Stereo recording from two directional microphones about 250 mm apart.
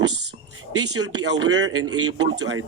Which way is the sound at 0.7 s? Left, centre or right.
Right.